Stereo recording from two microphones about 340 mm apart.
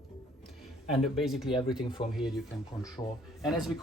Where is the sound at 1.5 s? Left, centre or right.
Centre.